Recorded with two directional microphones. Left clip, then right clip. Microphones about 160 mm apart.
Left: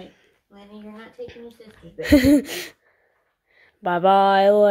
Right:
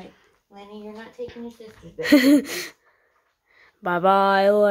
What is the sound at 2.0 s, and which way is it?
A woman's voice, 5° left (ahead or behind).